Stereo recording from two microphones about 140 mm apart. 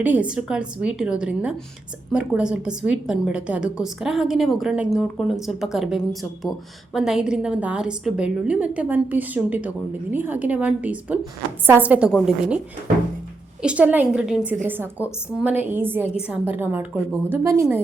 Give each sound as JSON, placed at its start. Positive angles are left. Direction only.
{"t": 0.0, "sound": "a woman's voice", "side_deg": -10}
{"t": 13.6, "sound": "a woman's voice", "side_deg": -10}